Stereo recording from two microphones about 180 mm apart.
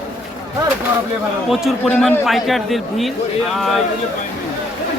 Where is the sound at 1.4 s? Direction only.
Centre (ahead or behind).